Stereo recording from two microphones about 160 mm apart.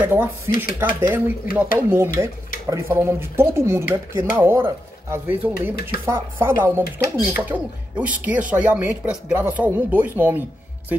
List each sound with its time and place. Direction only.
0.0 s speech: 10° right (ahead or behind)